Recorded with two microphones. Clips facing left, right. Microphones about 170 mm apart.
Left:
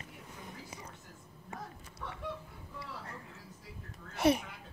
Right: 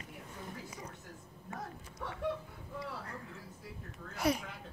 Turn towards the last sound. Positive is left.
turn(degrees=25)  # may be behind; listen again after turning